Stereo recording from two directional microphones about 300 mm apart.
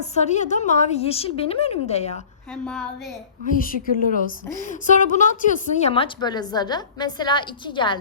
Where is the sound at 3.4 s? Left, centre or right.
Left.